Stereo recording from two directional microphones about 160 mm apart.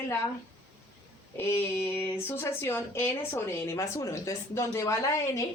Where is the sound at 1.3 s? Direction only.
15° left (ahead or behind).